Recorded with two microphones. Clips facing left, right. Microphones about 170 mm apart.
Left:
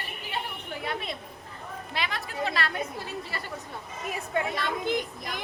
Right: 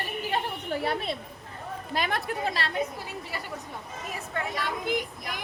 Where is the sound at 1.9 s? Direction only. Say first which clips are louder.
Right 5 dB; 50° right (ahead or behind).